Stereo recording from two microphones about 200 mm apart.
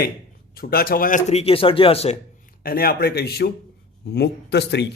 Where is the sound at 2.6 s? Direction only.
50° left (ahead or behind).